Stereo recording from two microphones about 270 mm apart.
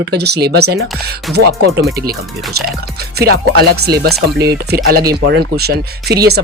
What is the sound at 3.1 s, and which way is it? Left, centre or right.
Speech, right.